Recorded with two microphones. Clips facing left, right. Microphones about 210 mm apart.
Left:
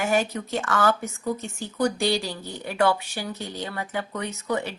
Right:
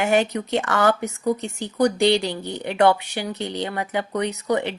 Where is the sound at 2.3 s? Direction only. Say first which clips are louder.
Right 6 dB; 20° right (ahead or behind).